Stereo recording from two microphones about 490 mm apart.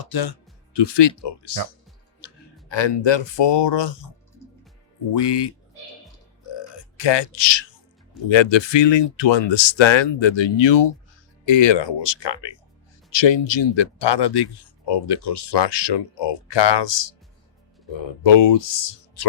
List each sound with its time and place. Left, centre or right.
0.0 s speech: left
5.1 s speech: left
6.5 s a sound: left
8.3 s speech: left
18.2 s speech: left